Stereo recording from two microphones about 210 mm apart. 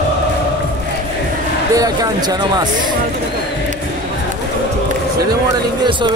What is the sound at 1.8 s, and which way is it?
Speech, 20° right (ahead or behind).